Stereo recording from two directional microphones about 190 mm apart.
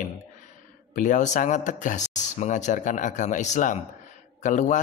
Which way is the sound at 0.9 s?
40° left (ahead or behind).